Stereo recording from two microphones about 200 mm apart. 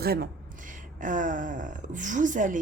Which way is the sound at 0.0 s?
50° right (ahead or behind).